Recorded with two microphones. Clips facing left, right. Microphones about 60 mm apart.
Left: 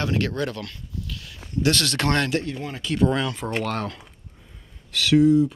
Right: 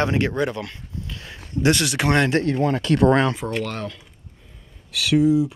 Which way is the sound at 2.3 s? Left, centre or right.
Right.